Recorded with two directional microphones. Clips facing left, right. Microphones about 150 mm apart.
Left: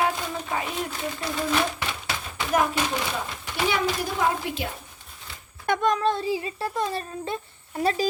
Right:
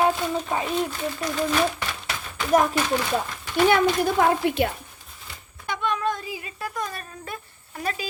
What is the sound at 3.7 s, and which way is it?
Speech, 60° right (ahead or behind).